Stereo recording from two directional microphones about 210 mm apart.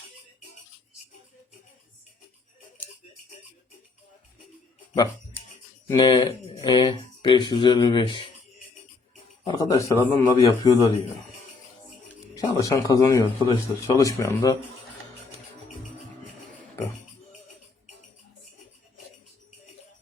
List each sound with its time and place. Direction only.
5.9 s speech: 20° left (ahead or behind)
9.4 s speech: 20° left (ahead or behind)
12.4 s speech: 15° left (ahead or behind)